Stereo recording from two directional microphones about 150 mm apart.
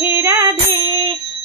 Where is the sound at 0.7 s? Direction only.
30° right (ahead or behind).